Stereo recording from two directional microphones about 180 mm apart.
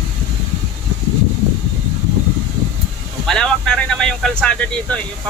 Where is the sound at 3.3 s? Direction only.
5° left (ahead or behind).